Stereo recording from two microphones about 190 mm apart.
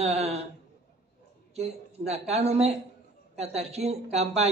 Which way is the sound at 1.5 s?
35° right (ahead or behind).